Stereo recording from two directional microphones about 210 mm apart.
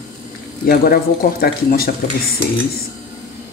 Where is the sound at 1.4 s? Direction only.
45° left (ahead or behind).